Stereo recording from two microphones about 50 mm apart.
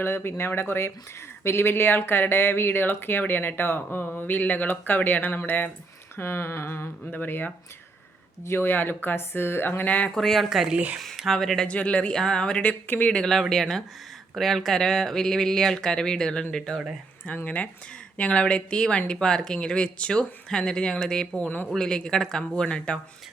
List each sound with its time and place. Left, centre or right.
0.0 s speech: left
7.0 s speech: left
10.2 s speech: centre
11.7 s speech: left
12.9 s speech: left
13.5 s speech: centre
17.2 s speech: left; by 21.2 s centre
21.3 s speech: left
21.7 s speech: centre